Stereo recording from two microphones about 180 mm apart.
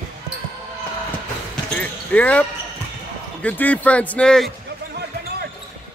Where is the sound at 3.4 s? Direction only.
10° left (ahead or behind).